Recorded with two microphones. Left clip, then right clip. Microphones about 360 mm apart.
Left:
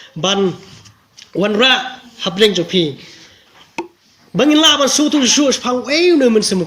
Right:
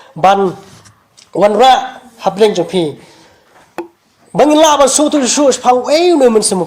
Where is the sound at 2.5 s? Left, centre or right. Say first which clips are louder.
Right 2 dB; centre.